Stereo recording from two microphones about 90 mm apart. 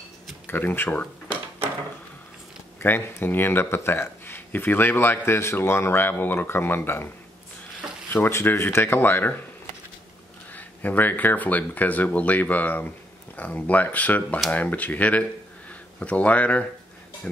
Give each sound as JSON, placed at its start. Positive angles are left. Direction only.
{"t": 0.5, "sound": "speech", "side_deg": 20}
{"t": 2.8, "sound": "speech", "side_deg": 25}
{"t": 8.1, "sound": "speech", "side_deg": 30}
{"t": 10.5, "sound": "speech", "side_deg": 20}